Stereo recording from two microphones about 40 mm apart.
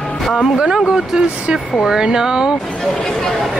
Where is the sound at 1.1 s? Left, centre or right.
Centre.